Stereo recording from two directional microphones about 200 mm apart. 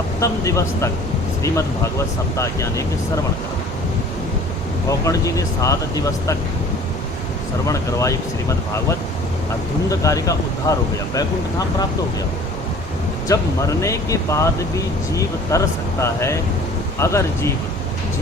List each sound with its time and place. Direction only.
0.2 s speech: 15° left (ahead or behind)
4.9 s speech: 15° left (ahead or behind)
7.7 s speech: 15° left (ahead or behind)
13.2 s speech: 15° left (ahead or behind)